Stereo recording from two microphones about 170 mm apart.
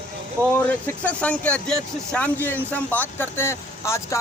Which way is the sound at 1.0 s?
10° left (ahead or behind).